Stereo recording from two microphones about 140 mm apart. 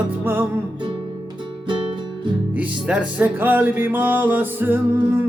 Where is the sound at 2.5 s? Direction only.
10° right (ahead or behind).